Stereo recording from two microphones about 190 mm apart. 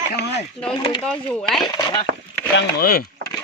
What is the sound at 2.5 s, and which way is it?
Speech, 55° left (ahead or behind).